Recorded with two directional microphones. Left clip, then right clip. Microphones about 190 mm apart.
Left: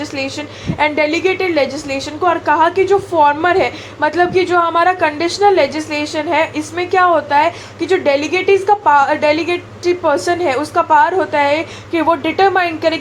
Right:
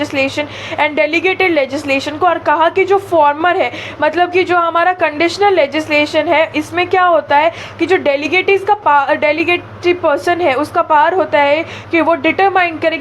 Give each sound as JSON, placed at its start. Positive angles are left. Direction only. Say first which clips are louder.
{"t": 0.0, "sound": "a woman's voice", "louder": "right 6 dB", "side_deg": -20}